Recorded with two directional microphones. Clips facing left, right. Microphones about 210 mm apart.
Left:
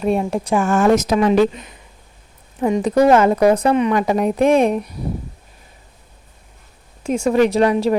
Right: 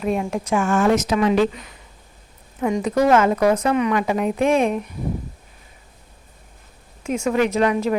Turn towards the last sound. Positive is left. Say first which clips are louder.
# left 4 dB
turn(degrees=35)  # may be behind; listen again after turning